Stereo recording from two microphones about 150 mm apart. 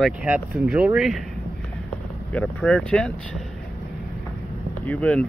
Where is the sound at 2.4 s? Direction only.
5° left (ahead or behind).